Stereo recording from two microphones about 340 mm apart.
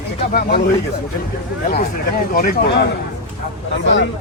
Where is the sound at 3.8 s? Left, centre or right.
Left.